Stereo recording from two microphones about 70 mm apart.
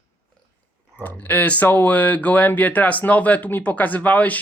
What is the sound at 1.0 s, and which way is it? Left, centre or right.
Speech, left.